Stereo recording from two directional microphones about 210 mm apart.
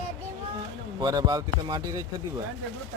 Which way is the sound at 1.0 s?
20° right (ahead or behind).